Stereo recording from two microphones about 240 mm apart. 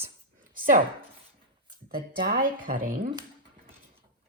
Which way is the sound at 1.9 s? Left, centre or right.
Right.